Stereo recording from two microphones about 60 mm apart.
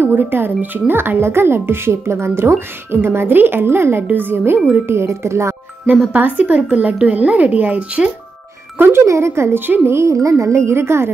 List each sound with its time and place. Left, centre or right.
0.0 s speech: right
4.8 s a woman's voice: right
6.1 s speech: right
8.7 s speech: right
9.0 s a woman's voice: right